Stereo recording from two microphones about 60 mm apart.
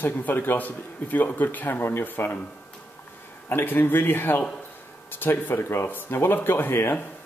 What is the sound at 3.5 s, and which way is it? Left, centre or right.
Speech, left.